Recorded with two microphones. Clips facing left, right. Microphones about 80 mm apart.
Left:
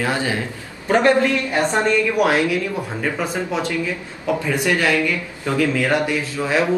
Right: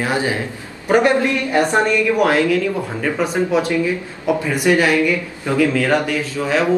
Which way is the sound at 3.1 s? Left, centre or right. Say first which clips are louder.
Right 10 dB; centre.